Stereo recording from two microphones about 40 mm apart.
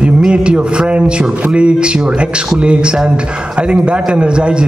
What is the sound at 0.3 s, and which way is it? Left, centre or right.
A man's voice, right.